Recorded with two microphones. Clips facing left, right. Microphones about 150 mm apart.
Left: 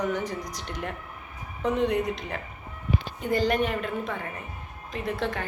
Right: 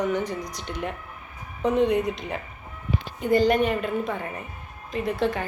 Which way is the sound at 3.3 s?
Centre (ahead or behind).